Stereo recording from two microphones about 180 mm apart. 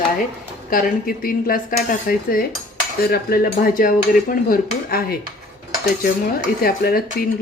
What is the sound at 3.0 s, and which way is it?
Dishes, 60° left (ahead or behind).